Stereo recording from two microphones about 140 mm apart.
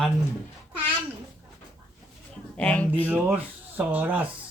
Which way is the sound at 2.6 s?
10° left (ahead or behind).